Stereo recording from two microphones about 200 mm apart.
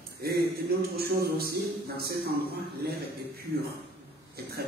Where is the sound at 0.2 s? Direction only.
50° right (ahead or behind).